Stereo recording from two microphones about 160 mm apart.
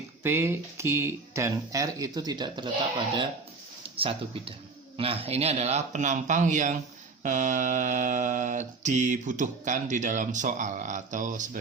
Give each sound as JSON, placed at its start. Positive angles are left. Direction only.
{"t": 0.2, "sound": "speech", "side_deg": -15}
{"t": 3.9, "sound": "speech", "side_deg": -35}